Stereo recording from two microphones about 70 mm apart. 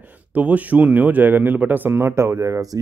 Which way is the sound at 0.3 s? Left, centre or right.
Right.